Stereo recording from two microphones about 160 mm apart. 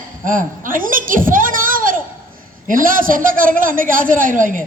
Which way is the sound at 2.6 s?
60° right (ahead or behind).